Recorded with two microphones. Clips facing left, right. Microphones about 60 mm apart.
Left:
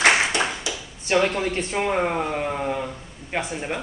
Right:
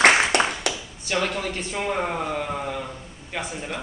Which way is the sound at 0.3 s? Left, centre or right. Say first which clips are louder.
Right 3 dB; right.